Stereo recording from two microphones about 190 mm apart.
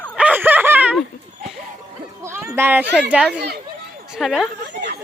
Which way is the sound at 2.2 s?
15° right (ahead or behind).